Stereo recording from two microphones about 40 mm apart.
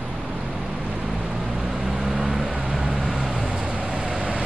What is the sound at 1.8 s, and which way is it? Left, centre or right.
Vehicle, centre.